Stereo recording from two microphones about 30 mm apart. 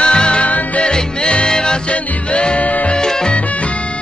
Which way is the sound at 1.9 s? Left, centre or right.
Left.